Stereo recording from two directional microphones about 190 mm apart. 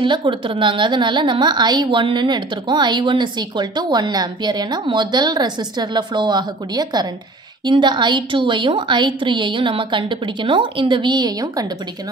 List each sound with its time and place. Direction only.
0.0 s a woman's voice: 25° right (ahead or behind)